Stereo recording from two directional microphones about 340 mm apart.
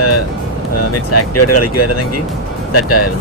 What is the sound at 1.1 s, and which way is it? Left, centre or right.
Speech, left.